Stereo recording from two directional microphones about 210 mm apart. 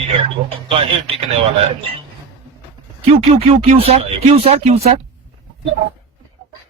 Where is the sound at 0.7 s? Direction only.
25° right (ahead or behind).